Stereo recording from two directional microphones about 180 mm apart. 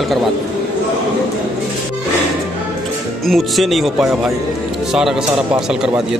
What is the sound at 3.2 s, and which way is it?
Speech, centre (ahead or behind).